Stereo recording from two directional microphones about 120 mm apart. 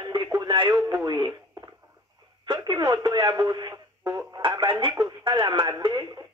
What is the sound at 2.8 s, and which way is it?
Speech, 25° right (ahead or behind).